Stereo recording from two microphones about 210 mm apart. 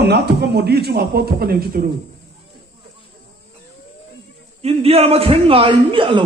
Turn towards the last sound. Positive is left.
turn(degrees=-25)  # may be behind; listen again after turning